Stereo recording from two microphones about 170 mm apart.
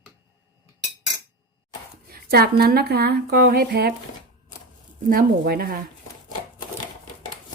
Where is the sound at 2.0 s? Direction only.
65° right (ahead or behind).